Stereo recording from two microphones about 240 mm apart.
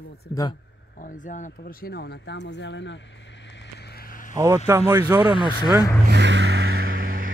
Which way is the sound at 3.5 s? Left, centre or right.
Left.